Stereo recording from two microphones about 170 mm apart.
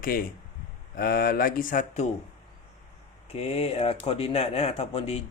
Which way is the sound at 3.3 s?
35° left (ahead or behind).